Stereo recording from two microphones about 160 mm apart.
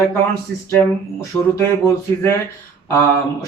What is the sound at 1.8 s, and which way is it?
Speech, 15° left (ahead or behind).